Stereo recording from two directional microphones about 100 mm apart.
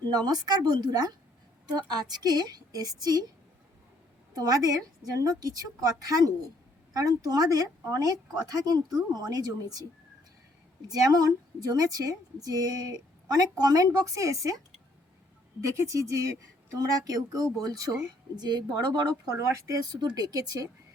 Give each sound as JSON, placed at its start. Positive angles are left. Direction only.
{"t": 0.1, "sound": "a woman's voice", "side_deg": -40}
{"t": 4.4, "sound": "a woman's voice", "side_deg": -40}
{"t": 10.8, "sound": "a woman's voice", "side_deg": -40}
{"t": 15.6, "sound": "a woman's voice", "side_deg": -30}